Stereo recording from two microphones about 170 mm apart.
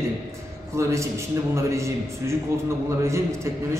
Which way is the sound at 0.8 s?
15° right (ahead or behind).